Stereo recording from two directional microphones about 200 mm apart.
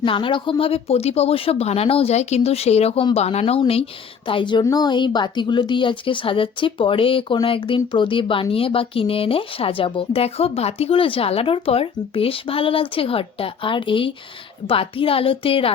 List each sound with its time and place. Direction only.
0.0 s a woman's voice: 25° left (ahead or behind)